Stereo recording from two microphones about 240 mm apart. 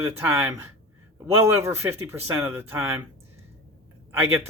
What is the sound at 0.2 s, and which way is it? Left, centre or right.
Speech, centre.